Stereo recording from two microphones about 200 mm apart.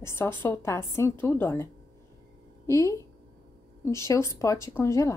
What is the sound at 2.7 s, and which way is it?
A woman's voice, 15° left (ahead or behind).